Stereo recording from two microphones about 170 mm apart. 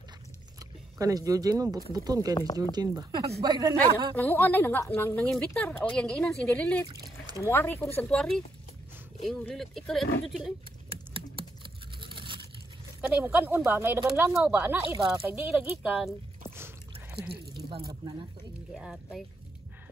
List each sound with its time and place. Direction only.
0.6 s speech: 20° right (ahead or behind)
4.1 s a woman's voice: 10° left (ahead or behind)
6.9 s a sound: 25° right (ahead or behind)
7.3 s a woman's voice: 15° left (ahead or behind)
10.9 s computer keyboard: 30° right (ahead or behind)
13.0 s speech: 10° right (ahead or behind)
17.3 s speech: 30° right (ahead or behind)
18.7 s speech: centre (ahead or behind)